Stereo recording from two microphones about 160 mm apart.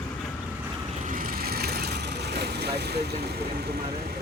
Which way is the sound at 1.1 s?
60° right (ahead or behind).